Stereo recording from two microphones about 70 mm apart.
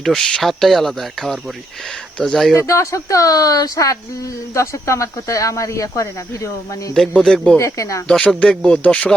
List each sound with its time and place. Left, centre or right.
0.0 s speech: centre
2.6 s speech: left
7.1 s speech: centre
7.6 s speech: left
8.4 s speech: centre